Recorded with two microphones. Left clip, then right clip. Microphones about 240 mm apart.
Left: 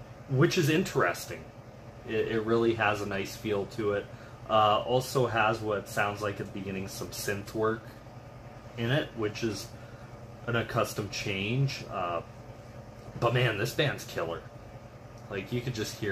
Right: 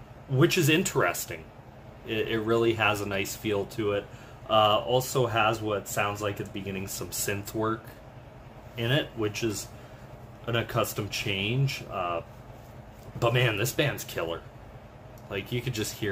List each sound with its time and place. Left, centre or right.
0.4 s speech: centre
8.7 s speech: centre
13.2 s speech: centre